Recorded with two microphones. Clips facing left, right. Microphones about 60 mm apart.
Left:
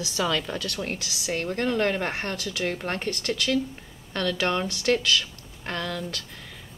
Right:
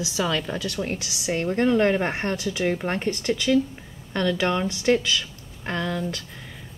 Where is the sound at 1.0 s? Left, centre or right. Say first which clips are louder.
Right 3 dB; right.